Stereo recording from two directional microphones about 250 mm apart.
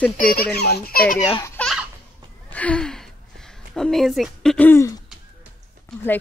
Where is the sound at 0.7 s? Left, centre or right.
Left.